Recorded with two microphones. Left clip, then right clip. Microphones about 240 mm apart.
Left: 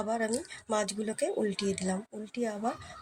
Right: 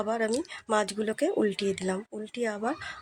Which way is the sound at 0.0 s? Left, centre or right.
Right.